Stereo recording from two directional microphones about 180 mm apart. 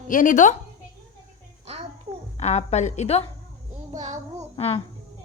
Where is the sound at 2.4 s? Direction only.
40° left (ahead or behind).